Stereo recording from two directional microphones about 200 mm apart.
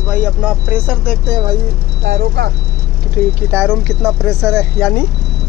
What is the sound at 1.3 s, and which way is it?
Speech, 25° right (ahead or behind).